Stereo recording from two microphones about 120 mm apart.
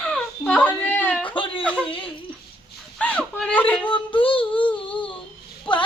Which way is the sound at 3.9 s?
45° left (ahead or behind).